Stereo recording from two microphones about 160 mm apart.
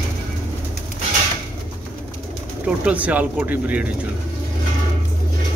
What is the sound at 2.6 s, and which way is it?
Speech, 10° right (ahead or behind).